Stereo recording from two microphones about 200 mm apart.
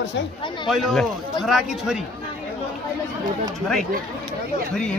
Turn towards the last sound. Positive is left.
turn(degrees=5)  # may be behind; listen again after turning